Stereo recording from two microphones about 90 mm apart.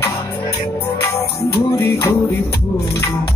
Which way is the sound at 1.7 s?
30° left (ahead or behind).